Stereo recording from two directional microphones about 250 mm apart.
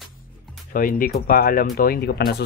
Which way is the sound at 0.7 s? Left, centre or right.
Left.